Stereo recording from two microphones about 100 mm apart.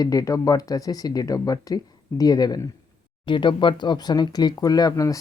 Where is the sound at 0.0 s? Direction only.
35° left (ahead or behind).